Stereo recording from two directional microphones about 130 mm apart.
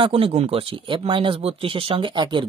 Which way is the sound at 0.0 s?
45° right (ahead or behind).